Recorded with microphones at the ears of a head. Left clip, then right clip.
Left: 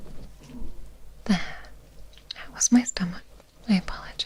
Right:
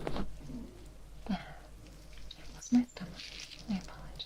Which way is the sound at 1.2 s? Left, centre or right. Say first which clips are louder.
Left 12 dB; left.